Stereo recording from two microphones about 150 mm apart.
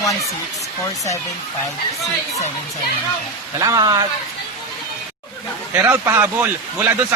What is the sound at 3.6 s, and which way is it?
Speech, 25° right (ahead or behind).